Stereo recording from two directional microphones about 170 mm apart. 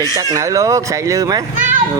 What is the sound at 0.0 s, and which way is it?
Speech, 20° right (ahead or behind).